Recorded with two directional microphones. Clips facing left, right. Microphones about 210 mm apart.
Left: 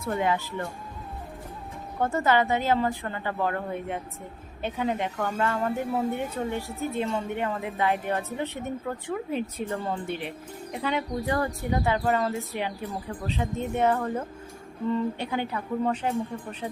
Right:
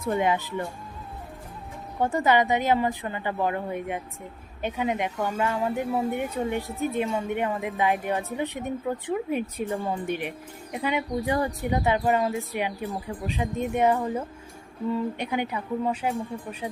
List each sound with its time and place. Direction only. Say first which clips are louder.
0.1 s a woman's voice: right 2 dB; 15° right (ahead or behind)
2.0 s a woman's voice: right 1 dB; 15° right (ahead or behind)